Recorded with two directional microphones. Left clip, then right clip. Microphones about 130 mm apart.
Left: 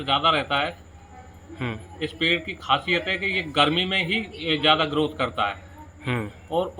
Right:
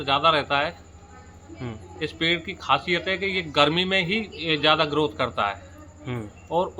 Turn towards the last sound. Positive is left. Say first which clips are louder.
# right 1 dB
turn(degrees=-30)  # may be behind; listen again after turning